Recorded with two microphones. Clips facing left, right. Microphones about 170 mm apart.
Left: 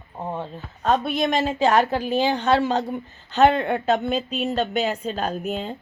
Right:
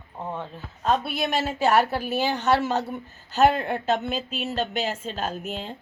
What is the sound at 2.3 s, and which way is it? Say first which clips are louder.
Speech: even; 55° left (ahead or behind).